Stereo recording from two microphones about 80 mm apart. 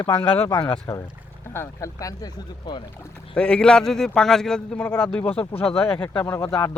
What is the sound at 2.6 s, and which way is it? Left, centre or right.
Speech, left.